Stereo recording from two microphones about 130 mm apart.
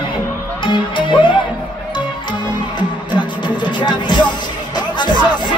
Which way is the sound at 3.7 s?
35° left (ahead or behind).